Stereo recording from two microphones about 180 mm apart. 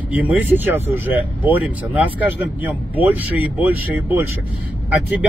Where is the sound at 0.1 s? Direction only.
10° right (ahead or behind).